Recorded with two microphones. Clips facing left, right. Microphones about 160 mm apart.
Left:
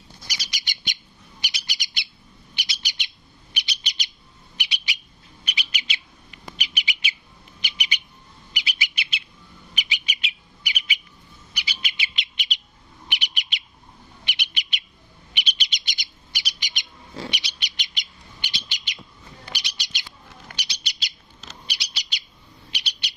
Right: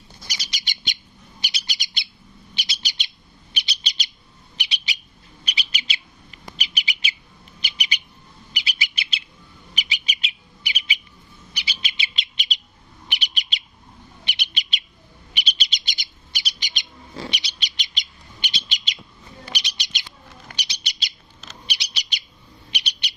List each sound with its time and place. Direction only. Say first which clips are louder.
0.3 s bird: right 1 dB; 25° right (ahead or behind)
8.5 s bird: even; 35° right (ahead or behind)
17.9 s bird: right 2 dB; 20° right (ahead or behind)